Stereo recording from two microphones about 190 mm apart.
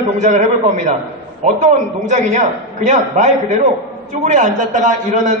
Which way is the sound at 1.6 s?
40° right (ahead or behind).